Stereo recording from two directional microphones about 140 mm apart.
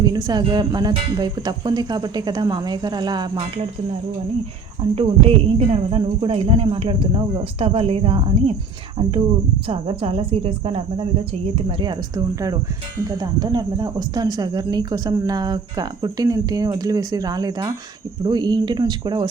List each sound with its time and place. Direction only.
0.0 s speech: 30° right (ahead or behind)
4.9 s speech: 40° right (ahead or behind)
9.6 s speech: 40° right (ahead or behind)